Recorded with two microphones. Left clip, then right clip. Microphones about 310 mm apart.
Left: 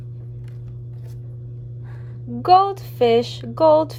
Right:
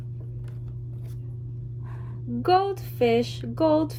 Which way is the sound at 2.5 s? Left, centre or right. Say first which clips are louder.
Left 8 dB; left.